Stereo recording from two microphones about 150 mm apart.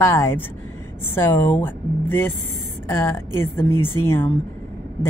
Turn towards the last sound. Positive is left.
turn(degrees=15)  # may be behind; listen again after turning